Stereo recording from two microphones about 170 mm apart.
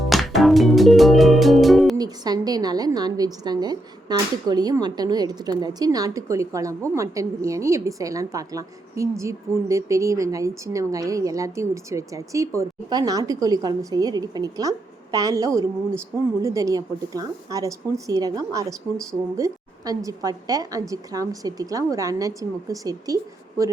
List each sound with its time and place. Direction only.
0.0 s music: centre (ahead or behind)
2.0 s a woman's voice: 25° right (ahead or behind)